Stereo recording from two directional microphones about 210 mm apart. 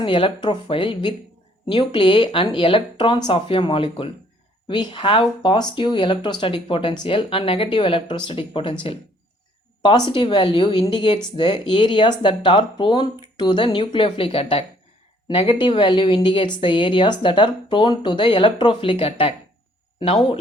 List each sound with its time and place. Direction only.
0.0 s a woman's voice: 25° left (ahead or behind)
10.1 s a woman's voice: 25° left (ahead or behind)